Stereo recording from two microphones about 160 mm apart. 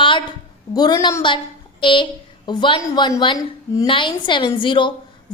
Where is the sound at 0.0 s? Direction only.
30° left (ahead or behind).